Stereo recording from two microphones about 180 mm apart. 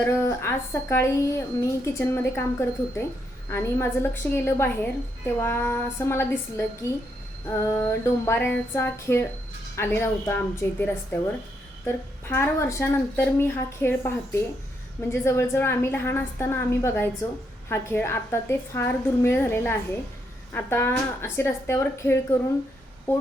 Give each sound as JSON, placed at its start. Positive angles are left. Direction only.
{"t": 0.3, "sound": "a woman's voice", "side_deg": 15}
{"t": 11.9, "sound": "a woman's voice", "side_deg": 15}
{"t": 15.1, "sound": "a woman's voice", "side_deg": 15}